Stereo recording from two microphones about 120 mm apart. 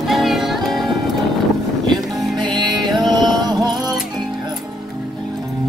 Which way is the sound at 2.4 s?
40° right (ahead or behind).